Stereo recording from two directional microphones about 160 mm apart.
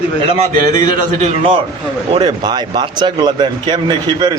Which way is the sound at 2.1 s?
30° right (ahead or behind).